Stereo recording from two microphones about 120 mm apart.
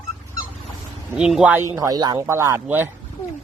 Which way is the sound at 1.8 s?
30° right (ahead or behind).